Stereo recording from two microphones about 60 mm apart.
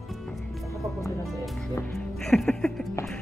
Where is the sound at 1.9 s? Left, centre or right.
Centre.